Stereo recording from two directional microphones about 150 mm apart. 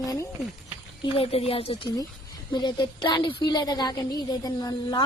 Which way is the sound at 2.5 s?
30° left (ahead or behind).